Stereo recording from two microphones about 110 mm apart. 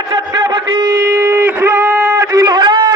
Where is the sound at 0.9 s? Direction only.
25° right (ahead or behind).